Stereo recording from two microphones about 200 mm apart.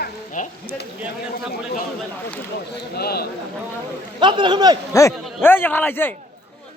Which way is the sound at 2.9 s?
50° left (ahead or behind).